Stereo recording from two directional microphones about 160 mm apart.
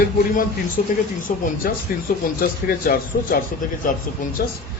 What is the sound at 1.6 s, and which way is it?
A man's voice, 65° left (ahead or behind).